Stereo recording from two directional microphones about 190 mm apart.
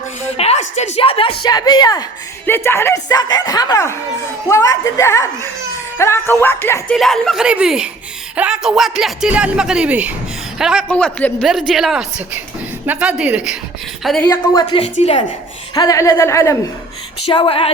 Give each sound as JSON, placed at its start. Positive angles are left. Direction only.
{"t": 0.3, "sound": "a sound", "side_deg": 35}
{"t": 0.9, "sound": "speech", "side_deg": 30}
{"t": 10.8, "sound": "a woman's voice", "side_deg": 10}
{"t": 14.3, "sound": "speech", "side_deg": 20}
{"t": 14.8, "sound": "a woman's voice", "side_deg": 30}
{"t": 15.7, "sound": "speech", "side_deg": 20}
{"t": 17.2, "sound": "speech", "side_deg": 30}